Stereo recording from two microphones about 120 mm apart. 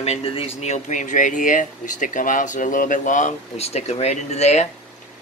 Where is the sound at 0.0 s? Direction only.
55° left (ahead or behind).